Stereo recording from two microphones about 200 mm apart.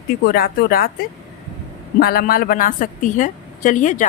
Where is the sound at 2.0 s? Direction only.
50° left (ahead or behind).